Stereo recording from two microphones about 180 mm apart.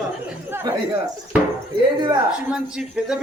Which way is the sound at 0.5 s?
15° right (ahead or behind).